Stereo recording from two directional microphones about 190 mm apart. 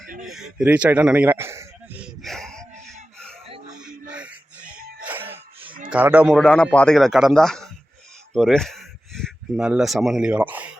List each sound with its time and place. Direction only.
0.3 s speech: centre (ahead or behind)
3.4 s a sound: 30° right (ahead or behind)
3.8 s music: 5° right (ahead or behind)
4.8 s music: 50° right (ahead or behind)
5.9 s a man's voice: 10° right (ahead or behind)